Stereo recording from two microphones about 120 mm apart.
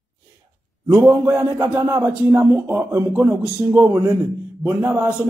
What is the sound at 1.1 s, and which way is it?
Speech, 30° right (ahead or behind).